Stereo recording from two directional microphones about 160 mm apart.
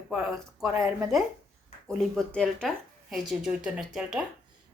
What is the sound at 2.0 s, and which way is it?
A woman's voice, 5° left (ahead or behind).